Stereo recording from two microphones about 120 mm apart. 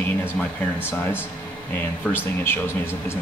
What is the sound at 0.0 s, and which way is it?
Speech, 15° left (ahead or behind).